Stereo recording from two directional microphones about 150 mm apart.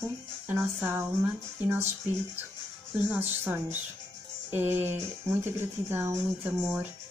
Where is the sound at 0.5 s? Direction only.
10° right (ahead or behind).